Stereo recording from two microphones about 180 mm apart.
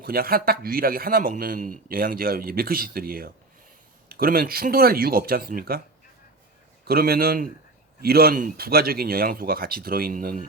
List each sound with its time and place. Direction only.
0.0 s a man's voice: 55° right (ahead or behind)
6.8 s a man's voice: 55° right (ahead or behind)